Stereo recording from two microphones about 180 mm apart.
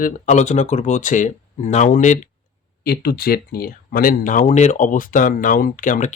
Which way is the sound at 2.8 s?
60° left (ahead or behind).